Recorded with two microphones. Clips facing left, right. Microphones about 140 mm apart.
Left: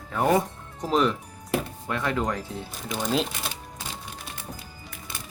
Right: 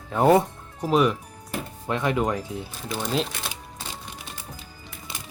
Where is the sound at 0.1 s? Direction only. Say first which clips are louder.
Right 4 dB; 25° right (ahead or behind).